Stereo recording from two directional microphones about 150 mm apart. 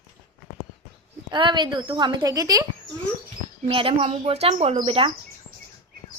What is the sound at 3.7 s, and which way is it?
Speech, 40° right (ahead or behind).